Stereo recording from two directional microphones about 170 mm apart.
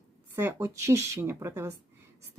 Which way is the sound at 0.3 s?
15° right (ahead or behind).